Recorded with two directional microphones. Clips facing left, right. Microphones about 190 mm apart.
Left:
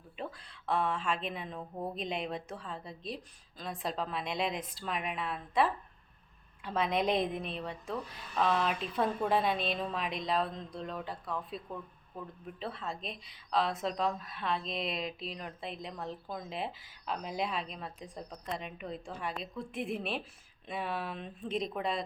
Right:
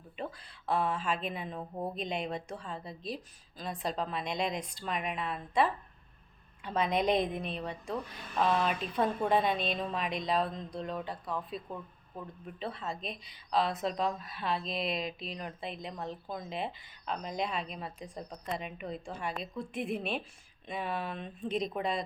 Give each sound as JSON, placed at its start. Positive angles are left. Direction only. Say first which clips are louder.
{"t": 0.2, "sound": "a woman's voice", "louder": "right 1 dB", "side_deg": 0}
{"t": 1.5, "sound": "a woman's voice", "louder": "right 2 dB", "side_deg": -20}
{"t": 2.0, "sound": "a woman's voice", "louder": "even", "side_deg": 0}